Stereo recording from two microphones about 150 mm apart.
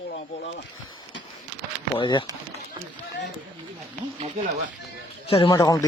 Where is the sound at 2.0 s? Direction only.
30° left (ahead or behind).